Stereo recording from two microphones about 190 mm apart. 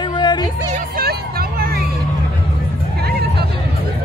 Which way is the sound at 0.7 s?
50° right (ahead or behind).